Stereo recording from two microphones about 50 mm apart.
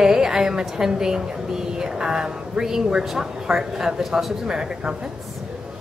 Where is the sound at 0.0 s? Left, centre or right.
Centre.